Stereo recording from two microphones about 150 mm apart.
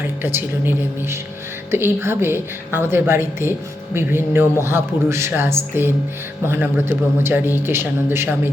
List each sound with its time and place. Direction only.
0.0 s a man's voice: 15° right (ahead or behind)